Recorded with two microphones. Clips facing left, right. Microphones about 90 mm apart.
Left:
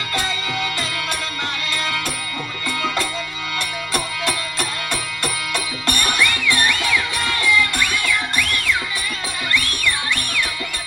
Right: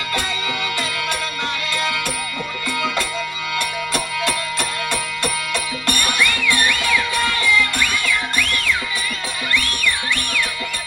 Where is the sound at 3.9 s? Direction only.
35° left (ahead or behind).